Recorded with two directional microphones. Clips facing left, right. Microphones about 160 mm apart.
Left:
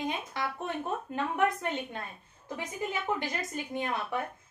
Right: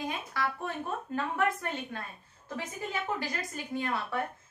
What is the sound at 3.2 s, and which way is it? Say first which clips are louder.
A woman's voice: left 2 dB; 20° left (ahead or behind).